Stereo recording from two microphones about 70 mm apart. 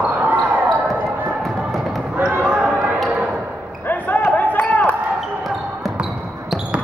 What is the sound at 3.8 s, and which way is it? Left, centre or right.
Basketball bounce, left.